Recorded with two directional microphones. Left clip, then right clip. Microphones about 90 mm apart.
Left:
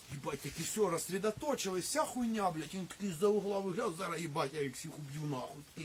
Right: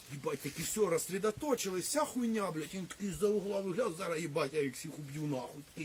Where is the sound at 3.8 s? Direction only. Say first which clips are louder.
Right 2 dB; 25° left (ahead or behind).